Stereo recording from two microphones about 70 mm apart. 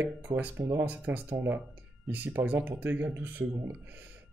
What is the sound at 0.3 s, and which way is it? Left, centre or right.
Speech, right.